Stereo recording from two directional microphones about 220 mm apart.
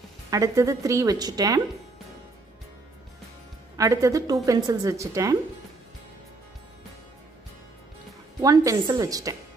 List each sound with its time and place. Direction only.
0.3 s a woman's voice: 15° right (ahead or behind)
3.7 s a woman's voice: 15° right (ahead or behind)
8.4 s a woman's voice: 15° right (ahead or behind)